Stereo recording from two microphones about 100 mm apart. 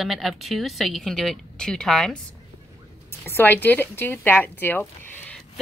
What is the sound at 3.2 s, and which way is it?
Speech, 20° left (ahead or behind).